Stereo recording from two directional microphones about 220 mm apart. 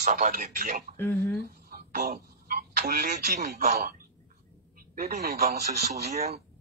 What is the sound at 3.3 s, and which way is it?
Speech, 35° right (ahead or behind).